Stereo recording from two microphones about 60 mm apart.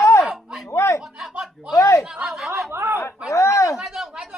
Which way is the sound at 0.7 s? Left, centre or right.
Left.